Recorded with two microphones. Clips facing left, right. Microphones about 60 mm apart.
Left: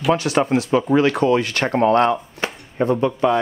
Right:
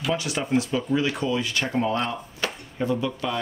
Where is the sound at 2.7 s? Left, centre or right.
Left.